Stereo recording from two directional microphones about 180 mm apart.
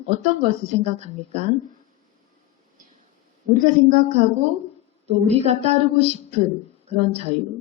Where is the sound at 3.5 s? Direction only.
45° right (ahead or behind).